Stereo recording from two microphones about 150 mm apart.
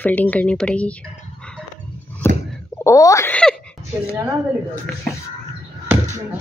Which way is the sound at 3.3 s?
5° left (ahead or behind).